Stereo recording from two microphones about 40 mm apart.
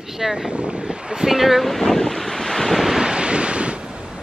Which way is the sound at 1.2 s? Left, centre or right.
Centre.